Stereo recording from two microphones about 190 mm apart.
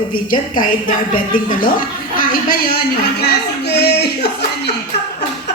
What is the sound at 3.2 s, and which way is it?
Speech, 60° left (ahead or behind).